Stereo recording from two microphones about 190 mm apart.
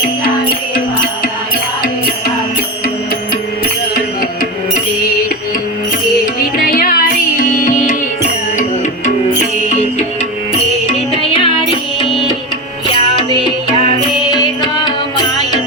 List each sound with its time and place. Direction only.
4.2 s music: 50° left (ahead or behind)
6.7 s music: 50° left (ahead or behind)
9.6 s music: 35° left (ahead or behind)
10.8 s music: 30° left (ahead or behind)
13.1 s music: 25° left (ahead or behind)